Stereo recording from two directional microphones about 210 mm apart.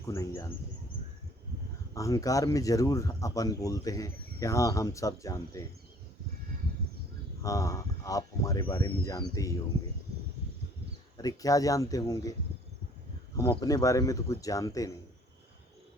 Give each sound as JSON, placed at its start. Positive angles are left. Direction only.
{"t": 0.0, "sound": "speech", "side_deg": 15}
{"t": 2.0, "sound": "speech", "side_deg": 15}
{"t": 7.4, "sound": "speech", "side_deg": 15}
{"t": 11.2, "sound": "speech", "side_deg": 15}
{"t": 13.3, "sound": "speech", "side_deg": 15}